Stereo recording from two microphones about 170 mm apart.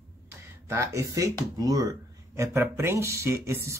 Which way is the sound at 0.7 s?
20° right (ahead or behind).